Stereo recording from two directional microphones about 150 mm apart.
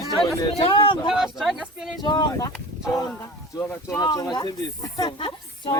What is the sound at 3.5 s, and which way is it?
Speech, 20° left (ahead or behind).